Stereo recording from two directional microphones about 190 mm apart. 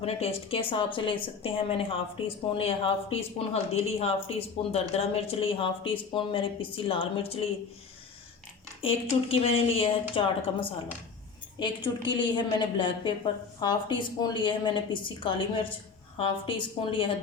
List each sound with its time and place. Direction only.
0.0 s a woman's voice: 30° left (ahead or behind)
8.8 s speech: 30° left (ahead or behind)